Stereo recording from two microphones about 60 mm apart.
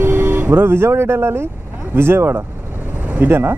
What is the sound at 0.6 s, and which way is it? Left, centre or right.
Speech, right.